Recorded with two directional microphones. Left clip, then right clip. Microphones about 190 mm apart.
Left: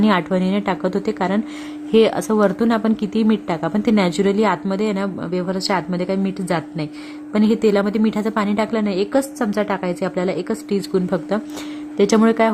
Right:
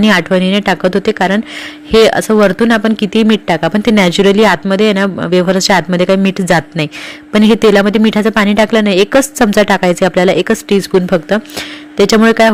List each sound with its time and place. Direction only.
0.0 s speech: 15° right (ahead or behind)